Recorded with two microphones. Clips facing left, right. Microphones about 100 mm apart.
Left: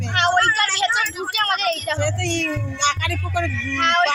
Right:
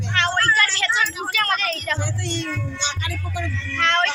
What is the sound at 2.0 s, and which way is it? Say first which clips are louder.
Speech: left 5 dB; 65° left (ahead or behind).